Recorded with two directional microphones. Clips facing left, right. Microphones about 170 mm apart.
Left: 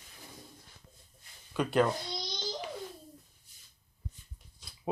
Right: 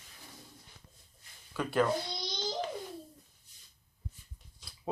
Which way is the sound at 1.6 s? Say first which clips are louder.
Left 2 dB; 20° left (ahead or behind).